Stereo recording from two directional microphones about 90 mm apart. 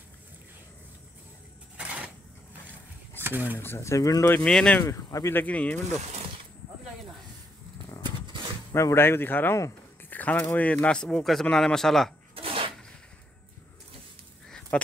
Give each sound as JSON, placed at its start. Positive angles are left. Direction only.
{"t": 1.8, "sound": "a sound", "side_deg": -15}
{"t": 3.2, "sound": "speech", "side_deg": -25}
{"t": 3.5, "sound": "speech", "side_deg": 30}
{"t": 4.4, "sound": "speech", "side_deg": 10}
{"t": 4.7, "sound": "speech", "side_deg": 35}
{"t": 5.3, "sound": "speech", "side_deg": 20}
{"t": 8.0, "sound": "a sound", "side_deg": -60}
{"t": 8.7, "sound": "speech", "side_deg": 30}
{"t": 12.4, "sound": "a sound", "side_deg": -90}
{"t": 14.7, "sound": "speech", "side_deg": 15}